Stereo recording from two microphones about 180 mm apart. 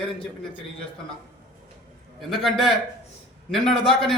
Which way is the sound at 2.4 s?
Centre (ahead or behind).